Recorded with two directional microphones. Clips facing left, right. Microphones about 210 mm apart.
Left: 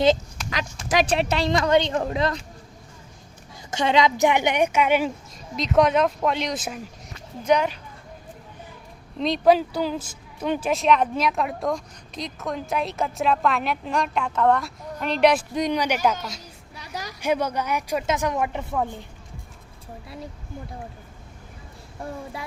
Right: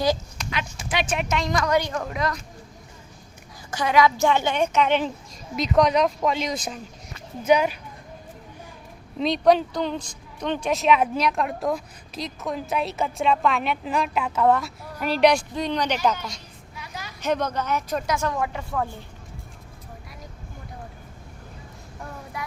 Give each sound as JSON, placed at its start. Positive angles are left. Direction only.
{"t": 0.9, "sound": "speech", "side_deg": 35}
{"t": 3.7, "sound": "a woman's voice", "side_deg": 25}
{"t": 7.4, "sound": "speech", "side_deg": -10}
{"t": 9.1, "sound": "a woman's voice", "side_deg": 0}
{"t": 15.5, "sound": "a woman's voice", "side_deg": 15}
{"t": 16.7, "sound": "a sound", "side_deg": 40}
{"t": 17.2, "sound": "a woman's voice", "side_deg": 10}
{"t": 22.4, "sound": "child singing", "side_deg": 25}